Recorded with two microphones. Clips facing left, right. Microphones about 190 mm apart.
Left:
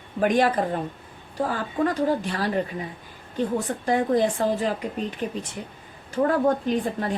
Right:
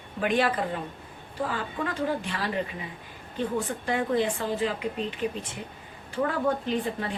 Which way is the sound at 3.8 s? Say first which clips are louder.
Left 5 dB; 40° left (ahead or behind).